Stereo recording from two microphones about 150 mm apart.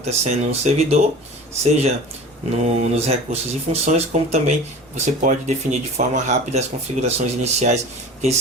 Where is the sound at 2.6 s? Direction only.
45° right (ahead or behind).